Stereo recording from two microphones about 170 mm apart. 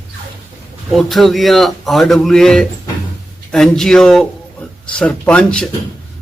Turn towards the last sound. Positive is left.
turn(degrees=5)  # may be behind; listen again after turning